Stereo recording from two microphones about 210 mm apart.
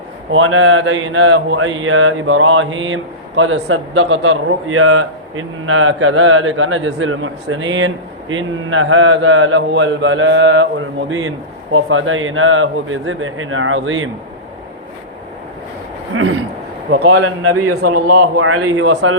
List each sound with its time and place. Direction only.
0.3 s speech: 70° right (ahead or behind)
16.1 s speech: 70° right (ahead or behind)
16.9 s speech: 60° right (ahead or behind)